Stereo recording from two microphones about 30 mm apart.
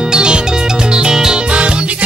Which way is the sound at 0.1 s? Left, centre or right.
Right.